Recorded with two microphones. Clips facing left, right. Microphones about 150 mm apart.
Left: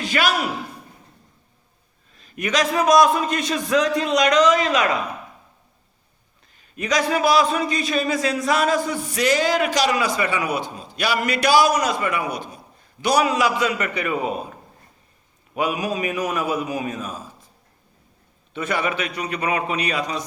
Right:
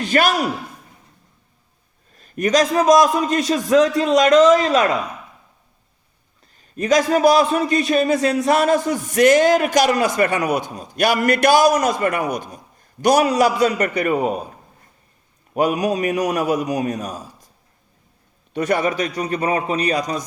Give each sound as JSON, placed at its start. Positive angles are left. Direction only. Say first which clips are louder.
{"t": 0.1, "sound": "a man's voice", "louder": "right 4 dB", "side_deg": -45}
{"t": 2.1, "sound": "a man's voice", "louder": "right 6 dB", "side_deg": -45}
{"t": 6.6, "sound": "a man's voice", "louder": "right 5 dB", "side_deg": -40}
{"t": 15.5, "sound": "a man's voice", "louder": "right 5 dB", "side_deg": -40}
{"t": 18.5, "sound": "a man's voice", "louder": "right 5 dB", "side_deg": -45}